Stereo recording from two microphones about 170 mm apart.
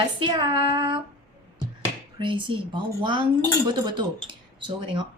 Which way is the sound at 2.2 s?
30° right (ahead or behind).